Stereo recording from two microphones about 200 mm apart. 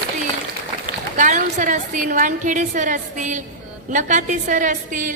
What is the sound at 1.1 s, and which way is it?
A woman's voice, 40° right (ahead or behind).